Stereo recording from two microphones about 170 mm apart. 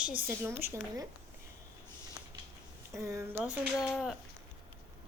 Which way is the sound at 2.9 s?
20° right (ahead or behind).